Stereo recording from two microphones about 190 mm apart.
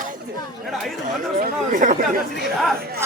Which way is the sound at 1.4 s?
40° right (ahead or behind).